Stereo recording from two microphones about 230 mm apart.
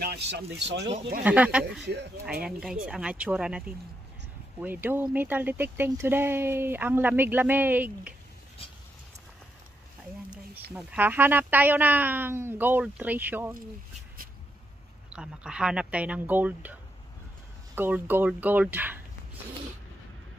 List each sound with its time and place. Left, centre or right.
0.0 s speech: right
1.2 s speech: centre
10.7 s speech: centre
15.1 s speech: centre
17.7 s speech: centre